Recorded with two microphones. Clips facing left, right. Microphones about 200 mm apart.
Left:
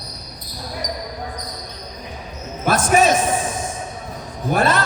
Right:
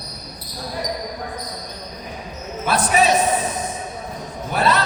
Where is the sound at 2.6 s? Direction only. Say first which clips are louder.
Left 2 dB; 45° left (ahead or behind).